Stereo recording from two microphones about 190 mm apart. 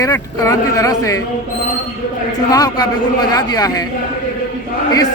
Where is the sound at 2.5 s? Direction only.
20° left (ahead or behind).